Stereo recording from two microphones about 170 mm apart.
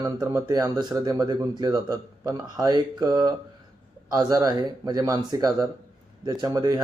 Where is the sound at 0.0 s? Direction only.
20° right (ahead or behind).